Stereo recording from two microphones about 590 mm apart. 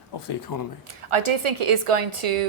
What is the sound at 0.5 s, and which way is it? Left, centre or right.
Speech, left.